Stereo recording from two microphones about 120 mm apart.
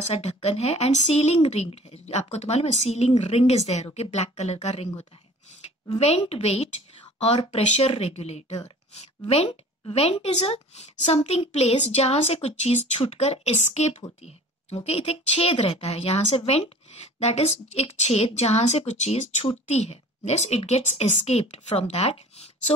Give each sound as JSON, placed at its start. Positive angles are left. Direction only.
{"t": 0.0, "sound": "a woman's voice", "side_deg": 65}